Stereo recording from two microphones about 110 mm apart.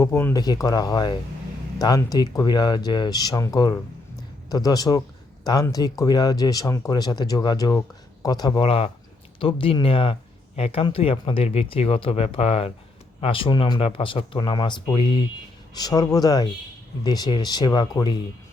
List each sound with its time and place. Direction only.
0.0 s speech: 25° left (ahead or behind)
0.3 s speech: 35° left (ahead or behind)
8.6 s speech: 55° left (ahead or behind)
15.7 s speech: 35° left (ahead or behind)